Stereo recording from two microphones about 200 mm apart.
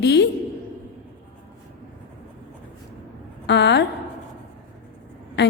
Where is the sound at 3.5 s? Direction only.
60° left (ahead or behind).